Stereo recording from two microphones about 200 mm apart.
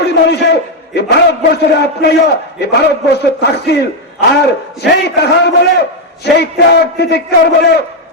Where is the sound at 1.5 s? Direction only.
55° left (ahead or behind).